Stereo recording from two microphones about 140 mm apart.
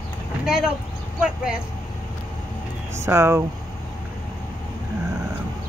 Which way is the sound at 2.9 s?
20° right (ahead or behind).